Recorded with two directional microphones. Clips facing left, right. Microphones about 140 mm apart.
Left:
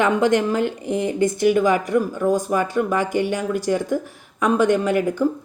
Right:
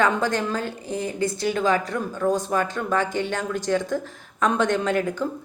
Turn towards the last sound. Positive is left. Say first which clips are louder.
# left 4 dB
turn(degrees=10)  # may be behind; listen again after turning